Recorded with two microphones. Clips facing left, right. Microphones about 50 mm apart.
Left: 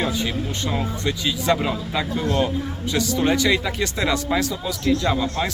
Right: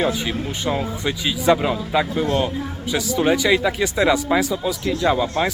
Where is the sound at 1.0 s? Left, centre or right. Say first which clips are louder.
Right 4 dB; centre.